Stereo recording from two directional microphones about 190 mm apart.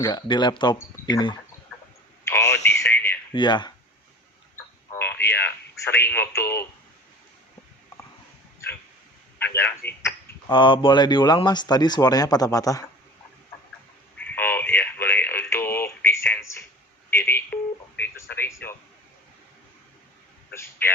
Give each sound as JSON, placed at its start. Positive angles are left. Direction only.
{"t": 0.0, "sound": "speech", "side_deg": 20}
{"t": 2.2, "sound": "a sound", "side_deg": 15}
{"t": 2.6, "sound": "radio", "side_deg": 15}
{"t": 3.3, "sound": "speech", "side_deg": 25}
{"t": 4.9, "sound": "radio", "side_deg": 10}
{"t": 9.4, "sound": "a man's voice", "side_deg": 10}
{"t": 10.5, "sound": "speech", "side_deg": 25}
{"t": 14.2, "sound": "radio", "side_deg": 10}
{"t": 17.1, "sound": "speech", "side_deg": 10}
{"t": 20.5, "sound": "a man's voice", "side_deg": 15}